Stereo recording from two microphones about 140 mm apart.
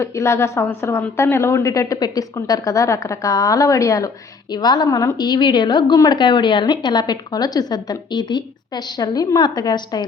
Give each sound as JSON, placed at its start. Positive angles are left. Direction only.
{"t": 0.0, "sound": "a woman's voice", "side_deg": 20}